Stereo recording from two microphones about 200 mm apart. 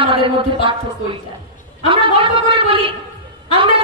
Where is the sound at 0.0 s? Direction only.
25° right (ahead or behind).